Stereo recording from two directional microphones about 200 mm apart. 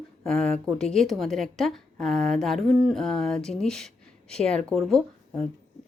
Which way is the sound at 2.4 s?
Centre (ahead or behind).